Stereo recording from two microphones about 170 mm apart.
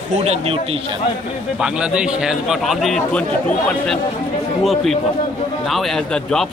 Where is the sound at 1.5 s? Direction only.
5° right (ahead or behind).